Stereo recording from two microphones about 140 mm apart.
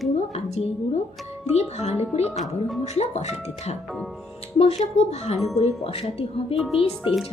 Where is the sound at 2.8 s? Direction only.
50° left (ahead or behind).